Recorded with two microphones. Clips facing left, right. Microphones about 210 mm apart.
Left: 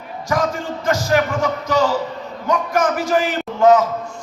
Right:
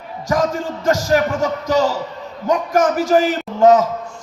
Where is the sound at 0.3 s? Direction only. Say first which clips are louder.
Right 2 dB; 40° right (ahead or behind).